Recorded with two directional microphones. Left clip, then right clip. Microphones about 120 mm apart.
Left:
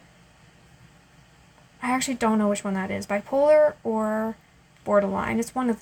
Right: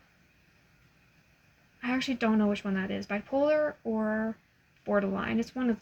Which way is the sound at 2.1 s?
20° right (ahead or behind).